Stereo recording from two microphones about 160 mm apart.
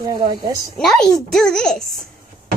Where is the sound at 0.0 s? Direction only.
20° right (ahead or behind).